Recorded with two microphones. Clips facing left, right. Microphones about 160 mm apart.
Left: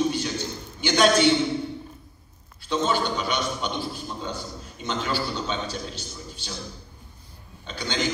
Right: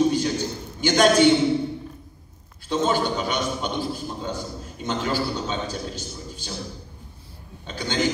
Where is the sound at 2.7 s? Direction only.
45° right (ahead or behind).